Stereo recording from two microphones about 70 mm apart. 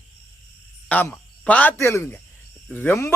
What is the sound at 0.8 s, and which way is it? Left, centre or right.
Speech, left.